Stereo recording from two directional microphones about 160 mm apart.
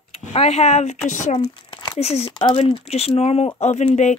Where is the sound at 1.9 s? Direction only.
40° left (ahead or behind).